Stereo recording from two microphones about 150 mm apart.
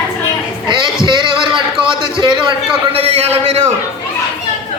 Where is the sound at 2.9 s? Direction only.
40° right (ahead or behind).